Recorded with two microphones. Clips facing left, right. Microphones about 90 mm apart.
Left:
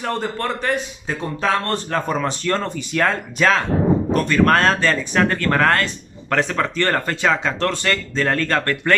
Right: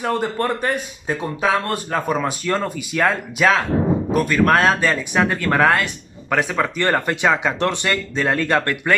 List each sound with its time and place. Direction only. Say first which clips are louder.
0.0 s speech: right 3 dB; 15° right (ahead or behind)